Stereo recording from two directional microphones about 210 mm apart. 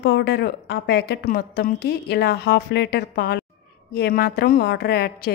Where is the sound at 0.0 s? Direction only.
55° left (ahead or behind).